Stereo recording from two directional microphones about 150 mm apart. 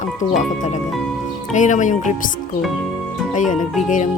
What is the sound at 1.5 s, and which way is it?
Speech, 55° left (ahead or behind).